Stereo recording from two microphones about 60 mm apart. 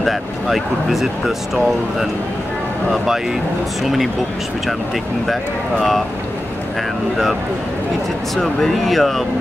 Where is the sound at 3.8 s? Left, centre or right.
Centre.